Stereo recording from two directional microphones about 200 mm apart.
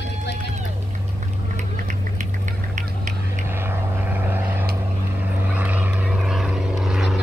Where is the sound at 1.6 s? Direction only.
40° right (ahead or behind).